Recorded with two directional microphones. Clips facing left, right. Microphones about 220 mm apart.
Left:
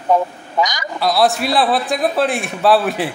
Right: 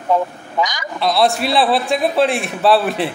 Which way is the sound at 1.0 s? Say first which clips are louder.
Even; centre (ahead or behind).